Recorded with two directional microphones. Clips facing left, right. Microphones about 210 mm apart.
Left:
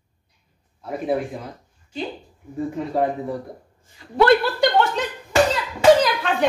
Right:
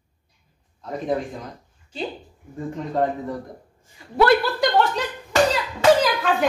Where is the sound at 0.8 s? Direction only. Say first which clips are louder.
Left 2 dB; 10° left (ahead or behind).